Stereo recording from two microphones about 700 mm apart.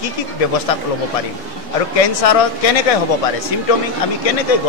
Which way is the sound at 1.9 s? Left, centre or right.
Left.